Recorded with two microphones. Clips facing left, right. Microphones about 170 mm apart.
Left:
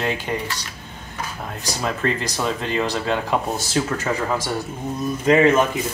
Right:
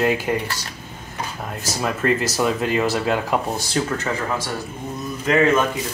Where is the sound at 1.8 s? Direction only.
5° right (ahead or behind).